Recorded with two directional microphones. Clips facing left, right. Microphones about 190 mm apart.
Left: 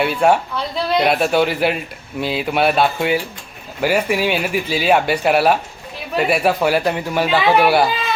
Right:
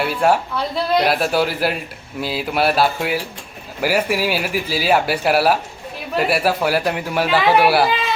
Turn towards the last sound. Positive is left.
turn(degrees=-5)  # may be behind; listen again after turning